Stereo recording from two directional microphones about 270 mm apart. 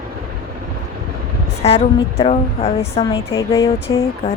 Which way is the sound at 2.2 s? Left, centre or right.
Left.